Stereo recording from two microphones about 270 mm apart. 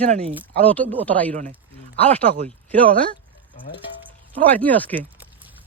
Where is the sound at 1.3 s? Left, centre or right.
Right.